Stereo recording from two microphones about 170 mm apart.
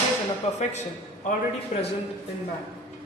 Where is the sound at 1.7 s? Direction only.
40° left (ahead or behind).